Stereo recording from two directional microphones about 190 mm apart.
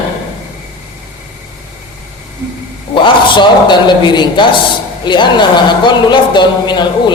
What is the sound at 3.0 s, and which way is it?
A man's voice, 25° left (ahead or behind).